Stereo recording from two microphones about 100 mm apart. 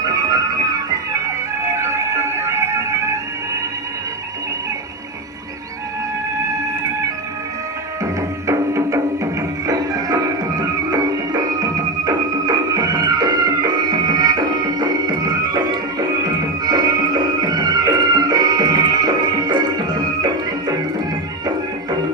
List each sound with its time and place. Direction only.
0.0 s music: 40° right (ahead or behind)
8.0 s music: 30° right (ahead or behind)